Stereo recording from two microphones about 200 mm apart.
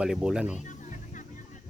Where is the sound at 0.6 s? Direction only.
40° left (ahead or behind).